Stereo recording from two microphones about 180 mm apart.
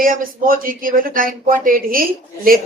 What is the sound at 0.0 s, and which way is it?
Speech, 50° right (ahead or behind).